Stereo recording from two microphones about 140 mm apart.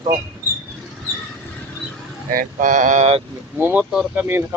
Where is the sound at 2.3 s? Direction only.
70° right (ahead or behind); by 3.2 s 50° right (ahead or behind).